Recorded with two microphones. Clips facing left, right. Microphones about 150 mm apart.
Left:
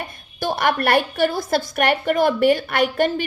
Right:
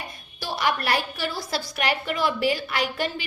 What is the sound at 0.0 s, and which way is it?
A woman's voice, 50° left (ahead or behind).